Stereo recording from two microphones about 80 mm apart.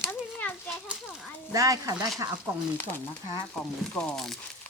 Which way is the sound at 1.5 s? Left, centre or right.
Right.